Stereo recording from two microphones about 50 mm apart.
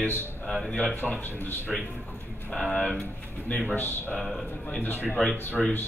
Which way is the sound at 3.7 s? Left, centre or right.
Left.